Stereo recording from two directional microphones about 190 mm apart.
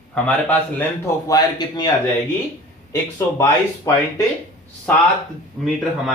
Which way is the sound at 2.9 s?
15° left (ahead or behind).